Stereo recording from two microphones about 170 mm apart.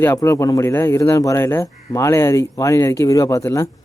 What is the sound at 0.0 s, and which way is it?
Speech, 15° left (ahead or behind).